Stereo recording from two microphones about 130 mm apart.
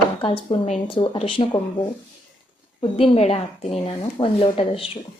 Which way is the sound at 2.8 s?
45° left (ahead or behind).